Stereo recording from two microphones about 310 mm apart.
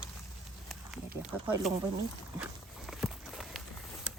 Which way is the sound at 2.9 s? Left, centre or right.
Centre.